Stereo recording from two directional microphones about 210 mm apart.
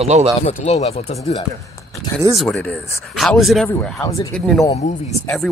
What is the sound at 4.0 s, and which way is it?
Speech, 15° left (ahead or behind).